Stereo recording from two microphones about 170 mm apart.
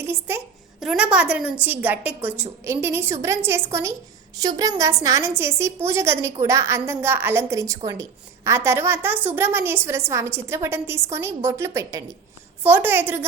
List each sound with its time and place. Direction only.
0.0 s a child's voice: 15° right (ahead or behind)